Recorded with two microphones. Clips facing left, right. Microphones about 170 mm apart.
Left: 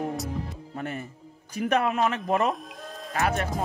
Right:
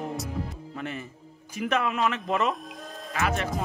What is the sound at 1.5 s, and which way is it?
Speech, 40° left (ahead or behind).